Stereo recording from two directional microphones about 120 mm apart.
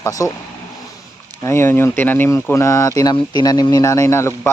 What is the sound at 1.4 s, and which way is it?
Speech, 20° left (ahead or behind).